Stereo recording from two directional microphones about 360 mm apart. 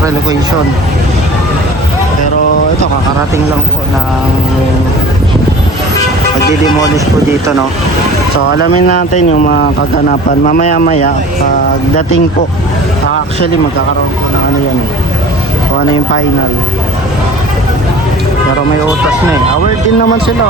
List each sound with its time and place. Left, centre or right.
8.5 s speech: left
10.4 s speech: left